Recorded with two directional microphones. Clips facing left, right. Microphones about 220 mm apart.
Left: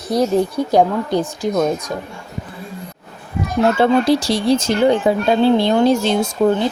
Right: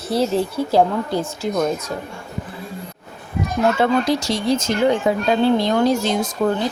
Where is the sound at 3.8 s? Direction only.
30° left (ahead or behind).